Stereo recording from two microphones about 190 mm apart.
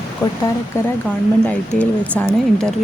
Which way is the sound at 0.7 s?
15° left (ahead or behind).